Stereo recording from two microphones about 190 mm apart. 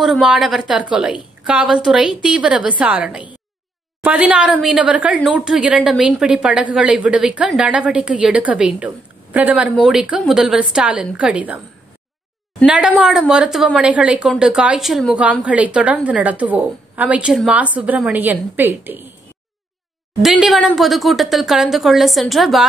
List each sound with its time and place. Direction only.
0.0 s a woman's voice: centre (ahead or behind)
12.6 s a woman's voice: 5° right (ahead or behind)
20.2 s a woman's voice: centre (ahead or behind)